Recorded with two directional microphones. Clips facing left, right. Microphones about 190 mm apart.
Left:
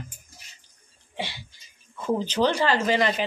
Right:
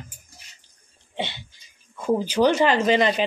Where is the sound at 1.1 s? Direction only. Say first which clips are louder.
Right 3 dB; 20° right (ahead or behind).